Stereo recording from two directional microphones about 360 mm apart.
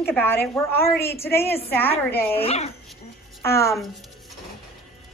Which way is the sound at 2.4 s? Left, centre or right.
Centre.